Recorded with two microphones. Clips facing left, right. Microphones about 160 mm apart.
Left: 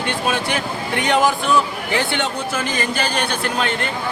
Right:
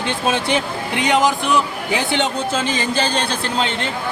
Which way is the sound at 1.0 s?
20° right (ahead or behind).